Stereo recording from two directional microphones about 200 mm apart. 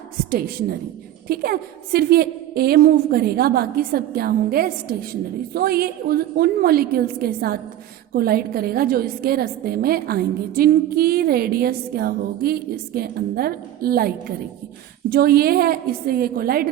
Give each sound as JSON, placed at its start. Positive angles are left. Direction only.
{"t": 1.3, "sound": "a woman's voice", "side_deg": -50}
{"t": 15.1, "sound": "a woman's voice", "side_deg": -50}